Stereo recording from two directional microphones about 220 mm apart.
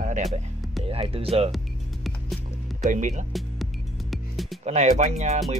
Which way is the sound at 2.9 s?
35° right (ahead or behind).